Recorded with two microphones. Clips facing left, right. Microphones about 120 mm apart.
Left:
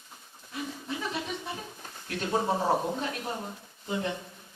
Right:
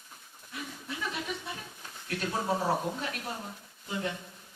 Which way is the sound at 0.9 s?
30° left (ahead or behind).